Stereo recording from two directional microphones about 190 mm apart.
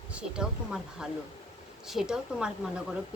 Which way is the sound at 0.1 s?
5° right (ahead or behind).